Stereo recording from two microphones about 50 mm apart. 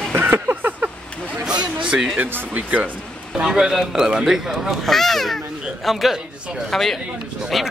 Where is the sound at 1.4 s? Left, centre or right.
Centre.